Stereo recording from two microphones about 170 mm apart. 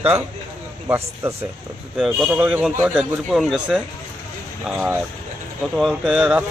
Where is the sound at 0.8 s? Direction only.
15° right (ahead or behind).